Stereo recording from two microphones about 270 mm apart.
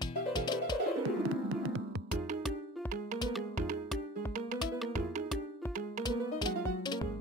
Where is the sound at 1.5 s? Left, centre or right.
Right.